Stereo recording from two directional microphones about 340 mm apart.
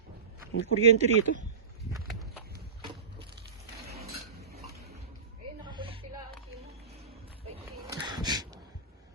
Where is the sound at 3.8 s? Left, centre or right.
Right.